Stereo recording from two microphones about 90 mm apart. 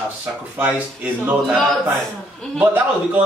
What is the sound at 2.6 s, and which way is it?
Speech, 20° right (ahead or behind).